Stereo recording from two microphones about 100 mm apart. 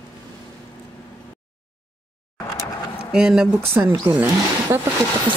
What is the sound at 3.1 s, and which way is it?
Speech, 5° right (ahead or behind).